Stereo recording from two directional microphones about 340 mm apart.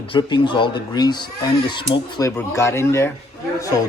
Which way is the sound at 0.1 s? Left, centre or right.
Centre.